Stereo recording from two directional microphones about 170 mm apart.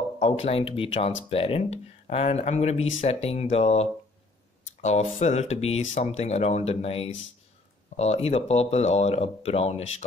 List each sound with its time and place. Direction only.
0.2 s speech: 35° left (ahead or behind)